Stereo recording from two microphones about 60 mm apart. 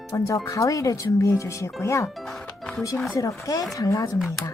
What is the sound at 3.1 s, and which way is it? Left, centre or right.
Speech, left.